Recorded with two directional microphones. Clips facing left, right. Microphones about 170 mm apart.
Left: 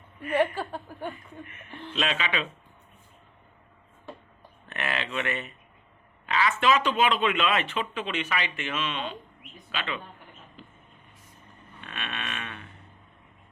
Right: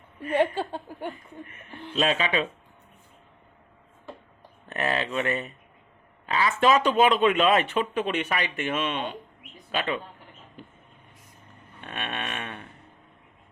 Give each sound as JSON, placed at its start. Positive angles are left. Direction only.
{"t": 0.2, "sound": "speech", "side_deg": -25}
{"t": 1.5, "sound": "speech", "side_deg": -35}
{"t": 4.7, "sound": "speech", "side_deg": -35}
{"t": 11.8, "sound": "a sound", "side_deg": -45}